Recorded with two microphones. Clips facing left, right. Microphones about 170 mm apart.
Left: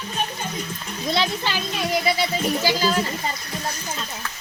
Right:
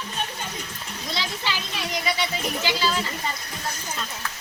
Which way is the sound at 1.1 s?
60° left (ahead or behind).